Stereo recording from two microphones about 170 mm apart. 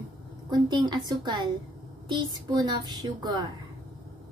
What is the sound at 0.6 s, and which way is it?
Speech, 25° right (ahead or behind).